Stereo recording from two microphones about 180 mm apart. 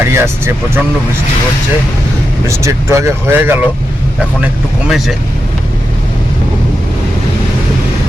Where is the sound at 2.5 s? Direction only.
15° right (ahead or behind).